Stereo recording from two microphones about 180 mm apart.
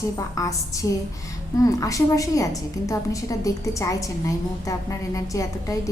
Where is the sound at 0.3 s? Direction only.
20° left (ahead or behind).